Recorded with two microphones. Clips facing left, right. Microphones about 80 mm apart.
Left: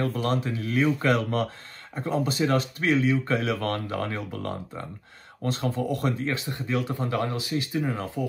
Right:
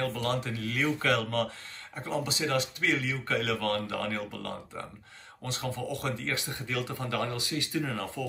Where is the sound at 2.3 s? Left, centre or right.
Left.